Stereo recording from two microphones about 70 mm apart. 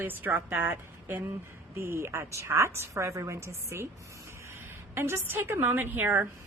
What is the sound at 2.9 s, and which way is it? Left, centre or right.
A woman's voice, right.